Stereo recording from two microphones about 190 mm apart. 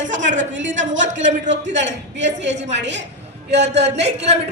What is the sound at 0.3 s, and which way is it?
A man's voice, 75° right (ahead or behind).